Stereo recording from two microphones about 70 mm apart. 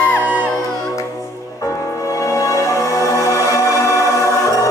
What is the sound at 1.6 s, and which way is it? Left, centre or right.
Music, left.